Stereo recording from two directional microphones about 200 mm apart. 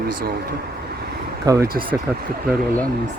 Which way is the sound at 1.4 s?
15° right (ahead or behind).